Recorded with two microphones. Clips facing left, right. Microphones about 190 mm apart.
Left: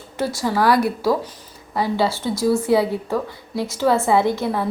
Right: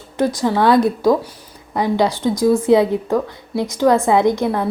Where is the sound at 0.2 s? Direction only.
15° right (ahead or behind).